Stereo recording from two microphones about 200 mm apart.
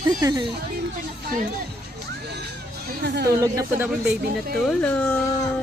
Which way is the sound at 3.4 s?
15° right (ahead or behind).